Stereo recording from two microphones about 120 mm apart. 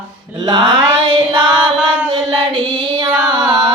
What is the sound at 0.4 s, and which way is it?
Mantra, 40° right (ahead or behind).